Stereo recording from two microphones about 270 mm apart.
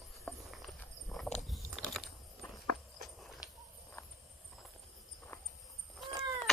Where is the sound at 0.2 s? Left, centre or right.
Centre.